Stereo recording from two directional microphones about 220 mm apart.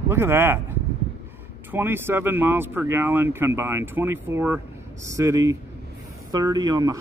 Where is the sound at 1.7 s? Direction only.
10° right (ahead or behind).